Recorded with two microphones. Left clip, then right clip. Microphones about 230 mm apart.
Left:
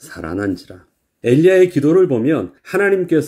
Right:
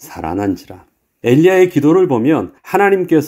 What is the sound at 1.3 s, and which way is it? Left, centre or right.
Speech, right.